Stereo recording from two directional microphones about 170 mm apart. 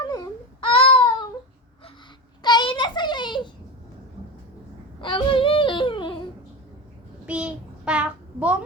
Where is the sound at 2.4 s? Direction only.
25° left (ahead or behind).